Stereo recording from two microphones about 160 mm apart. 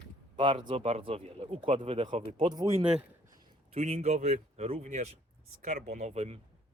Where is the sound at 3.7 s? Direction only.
45° right (ahead or behind).